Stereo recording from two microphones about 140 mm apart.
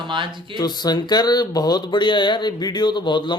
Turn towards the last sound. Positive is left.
turn(degrees=35)  # may be behind; listen again after turning